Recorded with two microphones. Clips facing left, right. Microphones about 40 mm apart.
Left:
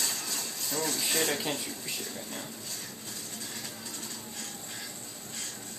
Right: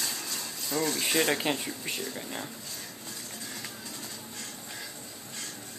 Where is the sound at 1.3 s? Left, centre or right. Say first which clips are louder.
Right 4 dB; right.